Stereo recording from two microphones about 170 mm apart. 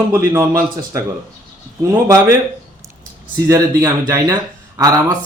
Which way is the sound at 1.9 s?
15° right (ahead or behind).